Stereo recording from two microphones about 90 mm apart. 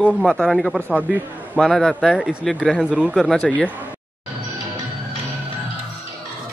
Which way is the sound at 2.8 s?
10° right (ahead or behind).